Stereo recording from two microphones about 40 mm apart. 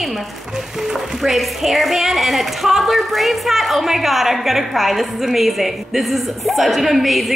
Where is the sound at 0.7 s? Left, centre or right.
Centre.